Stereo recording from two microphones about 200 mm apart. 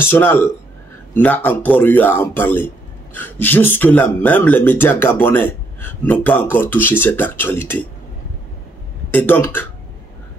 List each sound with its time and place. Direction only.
0.0 s speech: 10° left (ahead or behind)
9.1 s speech: 10° left (ahead or behind)